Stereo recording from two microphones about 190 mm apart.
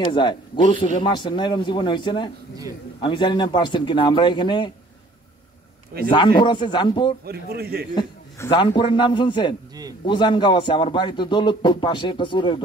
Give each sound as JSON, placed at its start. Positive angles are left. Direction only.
{"t": 0.0, "sound": "a man's voice", "side_deg": 25}
{"t": 6.0, "sound": "a man's voice", "side_deg": 25}
{"t": 7.2, "sound": "a man's voice", "side_deg": -55}
{"t": 7.9, "sound": "a man's voice", "side_deg": 25}